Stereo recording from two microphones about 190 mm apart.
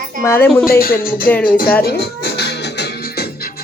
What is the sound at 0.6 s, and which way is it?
Speech, 50° left (ahead or behind).